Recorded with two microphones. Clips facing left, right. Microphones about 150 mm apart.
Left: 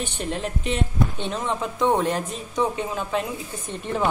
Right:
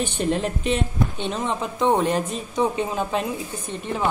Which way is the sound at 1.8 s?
20° right (ahead or behind).